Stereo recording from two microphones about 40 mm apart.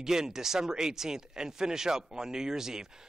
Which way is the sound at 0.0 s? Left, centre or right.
Centre.